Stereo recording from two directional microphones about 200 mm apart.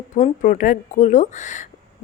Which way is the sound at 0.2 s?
40° left (ahead or behind).